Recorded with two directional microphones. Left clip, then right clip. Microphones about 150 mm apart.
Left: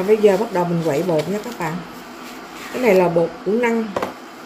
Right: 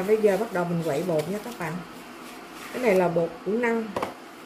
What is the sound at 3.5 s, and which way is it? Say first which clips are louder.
Speech: left 7 dB; centre (ahead or behind).